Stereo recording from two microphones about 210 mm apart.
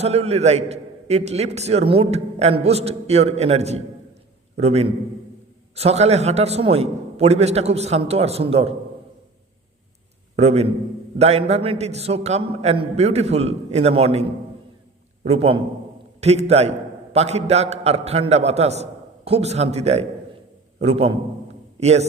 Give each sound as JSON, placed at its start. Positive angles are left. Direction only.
{"t": 0.0, "sound": "a man's voice", "side_deg": -30}
{"t": 10.3, "sound": "a man's voice", "side_deg": -30}